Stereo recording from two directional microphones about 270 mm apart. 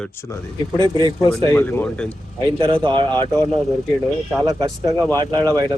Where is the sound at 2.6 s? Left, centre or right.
Centre.